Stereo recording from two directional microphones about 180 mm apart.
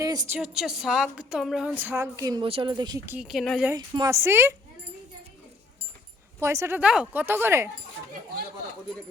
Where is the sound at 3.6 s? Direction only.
20° right (ahead or behind).